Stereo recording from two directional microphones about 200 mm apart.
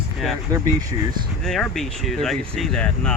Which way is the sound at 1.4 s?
Centre (ahead or behind).